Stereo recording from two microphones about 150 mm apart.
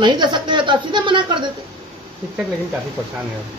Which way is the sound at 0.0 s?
30° right (ahead or behind).